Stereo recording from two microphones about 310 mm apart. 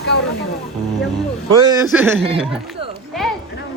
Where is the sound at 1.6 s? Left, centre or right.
Centre.